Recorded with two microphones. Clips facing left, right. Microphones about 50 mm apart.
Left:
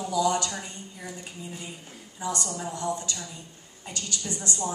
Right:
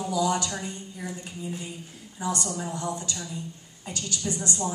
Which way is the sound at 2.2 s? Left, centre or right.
Centre.